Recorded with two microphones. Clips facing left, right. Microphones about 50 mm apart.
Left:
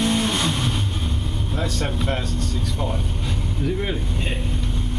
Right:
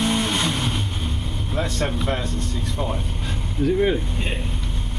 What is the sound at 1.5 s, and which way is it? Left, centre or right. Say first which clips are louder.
Vehicle: right 2 dB; right.